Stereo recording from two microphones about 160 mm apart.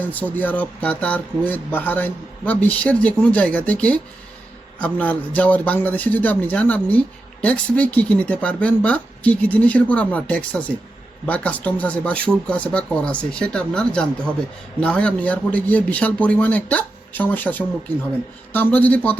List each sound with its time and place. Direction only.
0.0 s speech: 10° left (ahead or behind)